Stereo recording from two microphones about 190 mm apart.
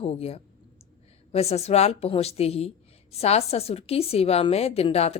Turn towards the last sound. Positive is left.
turn(degrees=30)  # may be behind; listen again after turning